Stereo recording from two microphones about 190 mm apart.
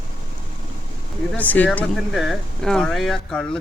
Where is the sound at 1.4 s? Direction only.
10° left (ahead or behind).